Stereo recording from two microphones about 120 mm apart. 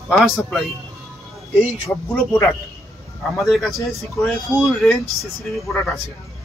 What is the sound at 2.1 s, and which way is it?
Speech, 20° left (ahead or behind).